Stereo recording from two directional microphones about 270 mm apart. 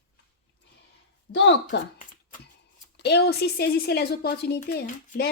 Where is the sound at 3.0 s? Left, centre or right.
Left.